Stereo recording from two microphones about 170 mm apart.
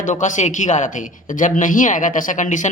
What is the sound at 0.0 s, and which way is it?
Speech, 45° left (ahead or behind).